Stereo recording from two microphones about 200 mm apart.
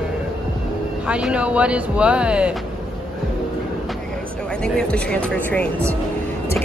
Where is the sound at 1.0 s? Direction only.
5° right (ahead or behind).